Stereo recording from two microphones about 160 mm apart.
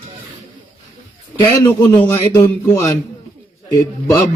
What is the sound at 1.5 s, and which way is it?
A man's voice, 20° left (ahead or behind).